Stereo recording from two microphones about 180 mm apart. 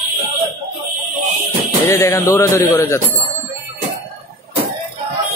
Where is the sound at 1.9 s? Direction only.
15° left (ahead or behind).